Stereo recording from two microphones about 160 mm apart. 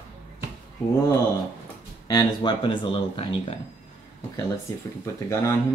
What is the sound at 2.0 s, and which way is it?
Speech, 30° left (ahead or behind).